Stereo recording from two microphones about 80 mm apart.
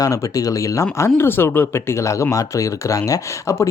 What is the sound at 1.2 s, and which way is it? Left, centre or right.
Speech, left.